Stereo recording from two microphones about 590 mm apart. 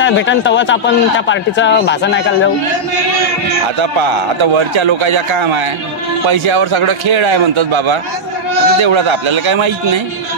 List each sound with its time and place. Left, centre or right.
0.0 s a man's voice: centre
3.8 s a man's voice: right